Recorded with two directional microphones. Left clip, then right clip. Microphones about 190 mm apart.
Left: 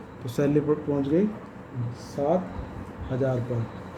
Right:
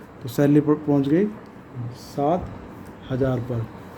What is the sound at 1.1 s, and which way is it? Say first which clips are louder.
Speech: right 1 dB; 60° right (ahead or behind).